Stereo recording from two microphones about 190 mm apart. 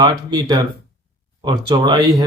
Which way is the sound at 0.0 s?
20° right (ahead or behind).